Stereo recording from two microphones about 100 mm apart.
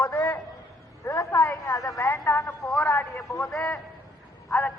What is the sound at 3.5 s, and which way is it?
Speech, 5° left (ahead or behind).